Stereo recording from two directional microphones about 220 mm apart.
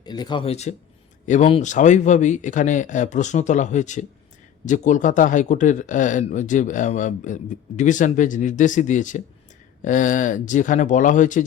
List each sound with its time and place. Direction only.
0.0 s speech: 20° left (ahead or behind); by 11.4 s 35° left (ahead or behind)